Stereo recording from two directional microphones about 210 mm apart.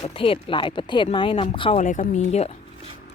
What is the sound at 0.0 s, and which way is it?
Speech, 25° left (ahead or behind).